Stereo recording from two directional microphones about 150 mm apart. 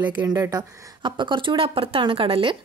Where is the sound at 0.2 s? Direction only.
25° right (ahead or behind).